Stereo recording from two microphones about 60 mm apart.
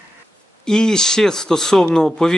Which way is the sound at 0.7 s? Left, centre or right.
Centre.